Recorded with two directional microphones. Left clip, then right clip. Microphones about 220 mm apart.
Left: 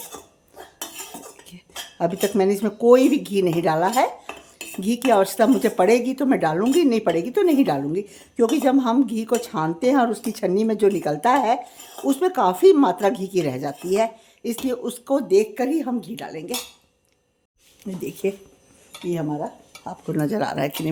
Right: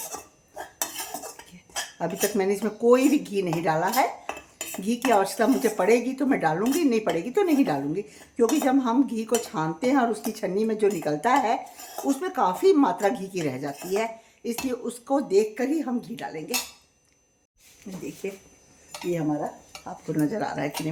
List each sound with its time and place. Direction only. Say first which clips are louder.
2.0 s speech: left 6 dB; 30° left (ahead or behind)
17.9 s speech: left 8 dB; 50° left (ahead or behind)
19.8 s speech: left 2 dB; 50° left (ahead or behind)